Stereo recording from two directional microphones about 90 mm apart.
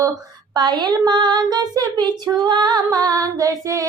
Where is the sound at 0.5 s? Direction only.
55° right (ahead or behind).